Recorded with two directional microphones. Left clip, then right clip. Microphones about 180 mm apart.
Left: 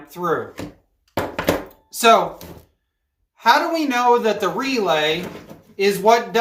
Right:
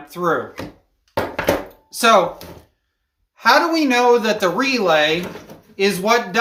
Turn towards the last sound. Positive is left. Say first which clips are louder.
# left 2 dB
turn(degrees=-35)  # may be behind; listen again after turning